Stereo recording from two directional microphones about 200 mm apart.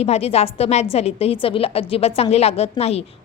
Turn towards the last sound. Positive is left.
turn(degrees=30)  # may be behind; listen again after turning